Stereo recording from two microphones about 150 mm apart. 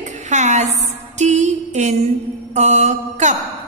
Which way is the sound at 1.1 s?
50° right (ahead or behind).